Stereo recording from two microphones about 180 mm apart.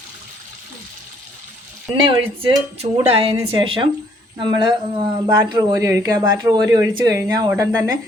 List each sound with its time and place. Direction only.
2.0 s a woman's voice: 35° right (ahead or behind)